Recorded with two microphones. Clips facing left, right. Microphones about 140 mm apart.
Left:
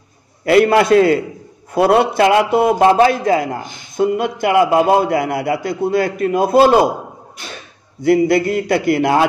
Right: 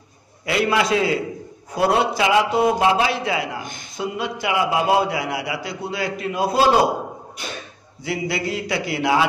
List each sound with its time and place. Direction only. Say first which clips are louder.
0.5 s a man's voice: left 9 dB; 55° left (ahead or behind)
8.0 s a man's voice: left 12 dB; 50° left (ahead or behind)